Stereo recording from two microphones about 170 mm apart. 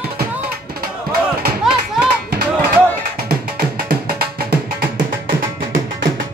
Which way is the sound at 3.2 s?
65° right (ahead or behind).